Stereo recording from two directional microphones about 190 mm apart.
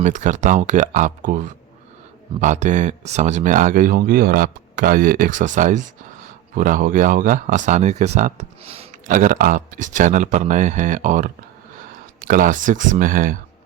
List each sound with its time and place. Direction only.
0.0 s speech: 40° right (ahead or behind)
9.0 s speech: 45° right (ahead or behind)